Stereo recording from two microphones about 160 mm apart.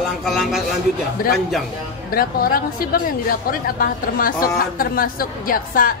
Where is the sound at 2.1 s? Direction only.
65° left (ahead or behind).